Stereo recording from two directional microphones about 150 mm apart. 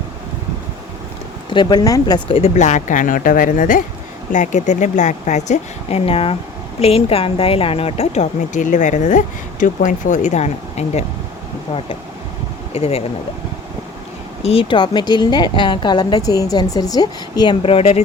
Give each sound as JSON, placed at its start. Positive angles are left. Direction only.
{"t": 1.5, "sound": "a woman's voice", "side_deg": 30}
{"t": 12.7, "sound": "speech", "side_deg": 40}
{"t": 14.4, "sound": "a woman's voice", "side_deg": 40}